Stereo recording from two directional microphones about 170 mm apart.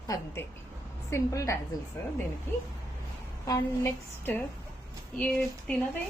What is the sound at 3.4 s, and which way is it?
A woman's voice, 15° left (ahead or behind).